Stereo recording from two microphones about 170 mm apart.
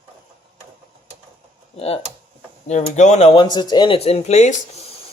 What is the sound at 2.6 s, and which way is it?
Speech, 40° left (ahead or behind).